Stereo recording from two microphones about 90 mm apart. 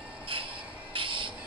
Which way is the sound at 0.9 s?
75° right (ahead or behind).